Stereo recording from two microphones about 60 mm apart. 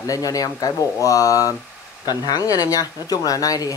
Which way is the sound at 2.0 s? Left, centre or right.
Left.